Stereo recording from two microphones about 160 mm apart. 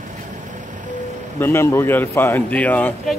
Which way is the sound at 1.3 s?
15° left (ahead or behind).